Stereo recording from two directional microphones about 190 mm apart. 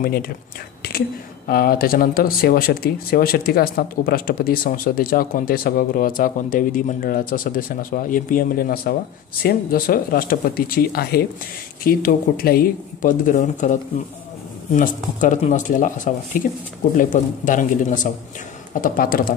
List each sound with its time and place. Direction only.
0.0 s speech: 50° left (ahead or behind)
0.8 s whispering: 55° left (ahead or behind)
1.5 s speech: 50° left (ahead or behind)